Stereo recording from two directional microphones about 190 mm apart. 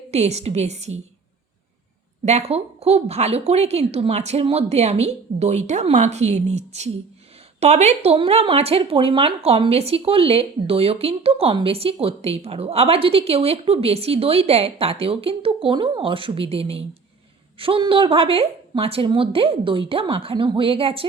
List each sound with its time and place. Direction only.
0.1 s speech: 35° right (ahead or behind)
2.2 s a woman's voice: 35° right (ahead or behind)